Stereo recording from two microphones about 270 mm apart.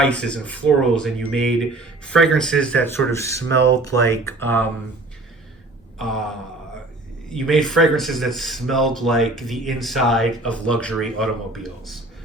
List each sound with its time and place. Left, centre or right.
0.0 s speech: centre
3.5 s speech: right
3.8 s speech: centre
6.0 s speech: centre